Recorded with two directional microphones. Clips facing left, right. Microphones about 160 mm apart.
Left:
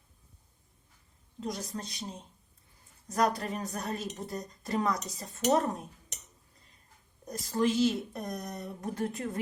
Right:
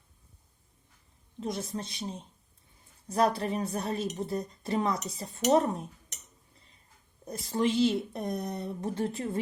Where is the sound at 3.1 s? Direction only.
25° right (ahead or behind).